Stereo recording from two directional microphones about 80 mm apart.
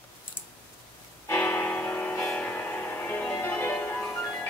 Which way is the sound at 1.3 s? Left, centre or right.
Left.